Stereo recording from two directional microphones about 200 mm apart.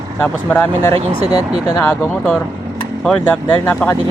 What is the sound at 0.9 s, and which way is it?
Speech, 30° right (ahead or behind).